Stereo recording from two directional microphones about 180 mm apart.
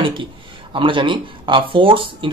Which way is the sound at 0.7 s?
25° right (ahead or behind).